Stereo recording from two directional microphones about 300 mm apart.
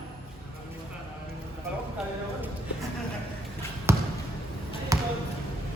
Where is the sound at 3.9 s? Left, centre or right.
Centre.